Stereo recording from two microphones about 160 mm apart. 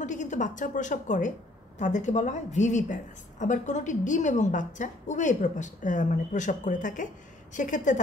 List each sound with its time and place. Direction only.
0.0 s a woman's voice: 50° left (ahead or behind)